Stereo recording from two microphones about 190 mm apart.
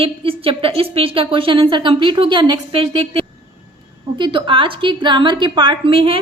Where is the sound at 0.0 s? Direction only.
30° right (ahead or behind).